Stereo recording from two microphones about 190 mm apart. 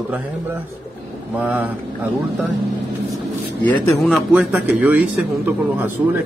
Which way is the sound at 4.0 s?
Centre (ahead or behind).